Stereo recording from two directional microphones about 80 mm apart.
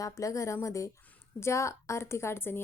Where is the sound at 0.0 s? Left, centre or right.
Left.